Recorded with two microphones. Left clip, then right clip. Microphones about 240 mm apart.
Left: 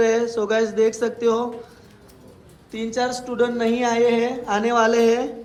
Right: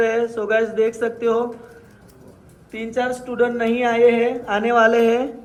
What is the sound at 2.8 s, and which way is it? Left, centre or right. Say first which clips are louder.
Speech: right 1 dB; centre.